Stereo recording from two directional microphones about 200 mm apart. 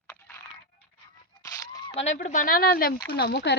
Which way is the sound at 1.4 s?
15° left (ahead or behind).